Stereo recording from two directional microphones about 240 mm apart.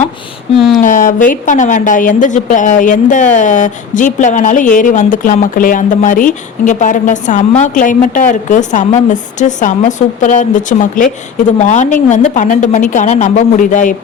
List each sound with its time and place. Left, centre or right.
0.5 s speech: centre
0.8 s a woman's voice: left